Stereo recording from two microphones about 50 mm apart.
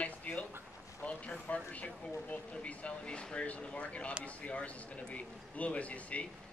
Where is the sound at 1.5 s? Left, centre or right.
Left.